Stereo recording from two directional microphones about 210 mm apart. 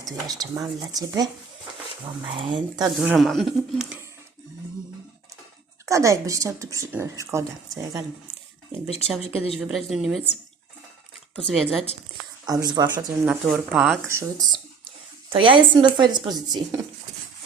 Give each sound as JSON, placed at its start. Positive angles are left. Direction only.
{"t": 0.3, "sound": "speech", "side_deg": -20}
{"t": 3.0, "sound": "speech", "side_deg": 0}
{"t": 5.8, "sound": "speech", "side_deg": -15}
{"t": 9.2, "sound": "a woman's voice", "side_deg": 30}
{"t": 9.6, "sound": "speech", "side_deg": -5}
{"t": 11.5, "sound": "speech", "side_deg": 0}
{"t": 12.5, "sound": "speech", "side_deg": -20}
{"t": 13.2, "sound": "speech", "side_deg": -5}
{"t": 14.1, "sound": "speech", "side_deg": -15}